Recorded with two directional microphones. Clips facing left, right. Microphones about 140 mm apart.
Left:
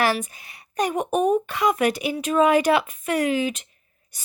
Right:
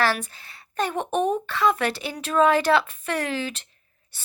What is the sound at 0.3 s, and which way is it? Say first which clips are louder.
Speech: left 1 dB; 20° left (ahead or behind).